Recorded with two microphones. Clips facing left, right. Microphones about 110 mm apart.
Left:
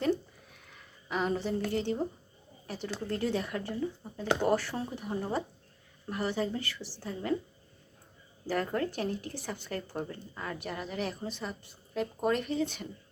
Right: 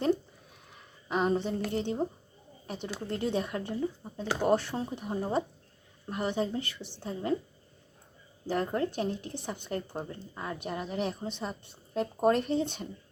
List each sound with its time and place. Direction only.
1.0 s a sound: 25° right (ahead or behind)
1.7 s speech: 20° right (ahead or behind)
8.4 s speech: 20° right (ahead or behind)
11.9 s speech: 35° right (ahead or behind)